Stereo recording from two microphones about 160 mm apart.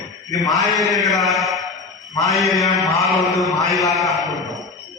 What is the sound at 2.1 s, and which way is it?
Mantra, 20° left (ahead or behind).